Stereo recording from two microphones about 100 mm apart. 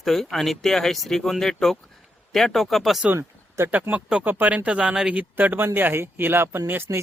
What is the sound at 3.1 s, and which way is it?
Speech, 25° right (ahead or behind).